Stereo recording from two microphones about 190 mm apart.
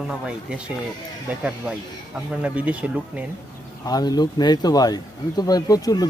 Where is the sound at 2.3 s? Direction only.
5° right (ahead or behind).